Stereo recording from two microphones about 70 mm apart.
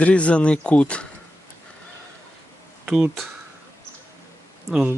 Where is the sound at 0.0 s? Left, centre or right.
Centre.